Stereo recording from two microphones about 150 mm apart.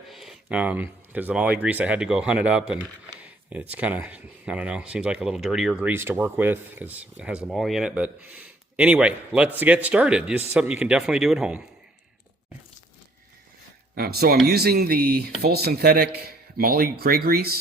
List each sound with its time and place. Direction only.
0.1 s speech: centre (ahead or behind)
13.9 s speech: 90° right